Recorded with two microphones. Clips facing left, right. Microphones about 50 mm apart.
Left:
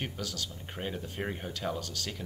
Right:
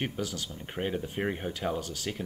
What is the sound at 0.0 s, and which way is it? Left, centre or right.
Speech, centre.